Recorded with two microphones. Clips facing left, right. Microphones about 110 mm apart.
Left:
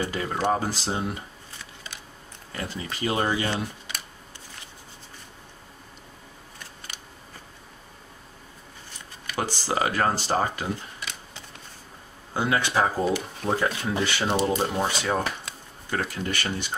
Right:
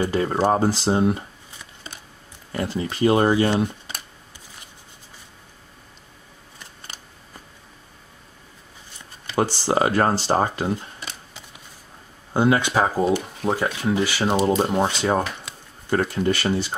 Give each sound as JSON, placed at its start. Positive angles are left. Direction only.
{"t": 0.1, "sound": "speech", "side_deg": -30}
{"t": 2.5, "sound": "speech", "side_deg": -20}
{"t": 3.1, "sound": "speech", "side_deg": -35}
{"t": 3.5, "sound": "computer keyboard", "side_deg": -35}
{"t": 9.5, "sound": "speech", "side_deg": -30}
{"t": 12.4, "sound": "speech", "side_deg": -25}
{"t": 14.4, "sound": "speech", "side_deg": -30}